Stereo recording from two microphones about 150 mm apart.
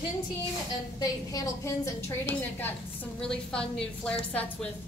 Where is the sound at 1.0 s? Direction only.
20° left (ahead or behind).